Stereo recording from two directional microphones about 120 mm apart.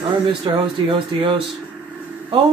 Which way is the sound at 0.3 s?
40° right (ahead or behind).